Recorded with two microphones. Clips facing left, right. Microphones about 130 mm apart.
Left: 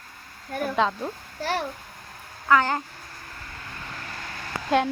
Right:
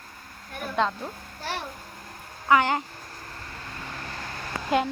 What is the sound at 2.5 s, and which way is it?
Speech, 15° right (ahead or behind).